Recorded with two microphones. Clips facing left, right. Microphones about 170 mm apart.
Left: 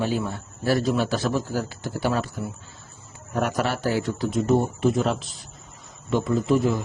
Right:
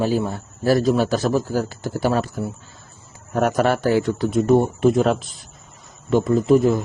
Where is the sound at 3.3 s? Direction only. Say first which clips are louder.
Right 6 dB; 45° right (ahead or behind).